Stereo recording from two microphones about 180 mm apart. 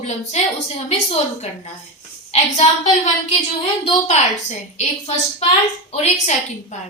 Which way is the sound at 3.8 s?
40° left (ahead or behind).